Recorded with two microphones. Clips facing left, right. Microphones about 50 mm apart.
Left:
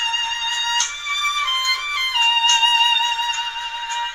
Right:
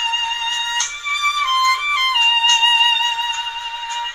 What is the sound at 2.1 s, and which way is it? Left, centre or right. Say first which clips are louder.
Music: even; centre.